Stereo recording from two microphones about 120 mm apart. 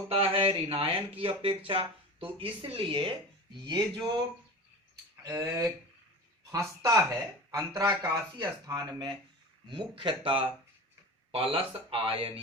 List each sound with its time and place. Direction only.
0.1 s speech: 50° right (ahead or behind); by 4.2 s 35° right (ahead or behind)
5.3 s speech: 30° right (ahead or behind)
6.8 s speech: 30° right (ahead or behind); by 12.3 s 50° right (ahead or behind)